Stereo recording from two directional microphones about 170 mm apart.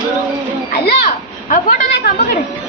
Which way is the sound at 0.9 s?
50° left (ahead or behind).